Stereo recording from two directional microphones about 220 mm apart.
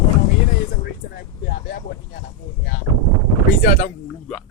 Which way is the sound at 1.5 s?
45° left (ahead or behind).